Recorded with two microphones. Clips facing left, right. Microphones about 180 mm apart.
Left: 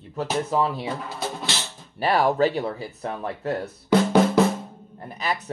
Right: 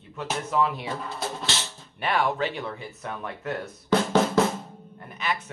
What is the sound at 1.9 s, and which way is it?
Speech, 35° left (ahead or behind).